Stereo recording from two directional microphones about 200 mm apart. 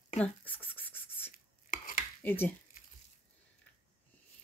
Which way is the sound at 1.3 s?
45° left (ahead or behind).